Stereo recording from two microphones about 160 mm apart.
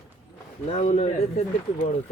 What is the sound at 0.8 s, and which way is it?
Speech, 50° left (ahead or behind).